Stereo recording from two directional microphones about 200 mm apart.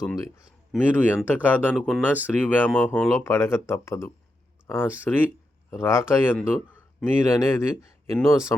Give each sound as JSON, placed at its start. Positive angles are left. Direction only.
{"t": 0.0, "sound": "speech", "side_deg": 15}